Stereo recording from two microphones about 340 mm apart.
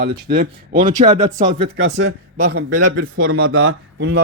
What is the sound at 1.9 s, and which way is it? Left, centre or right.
Speech, right.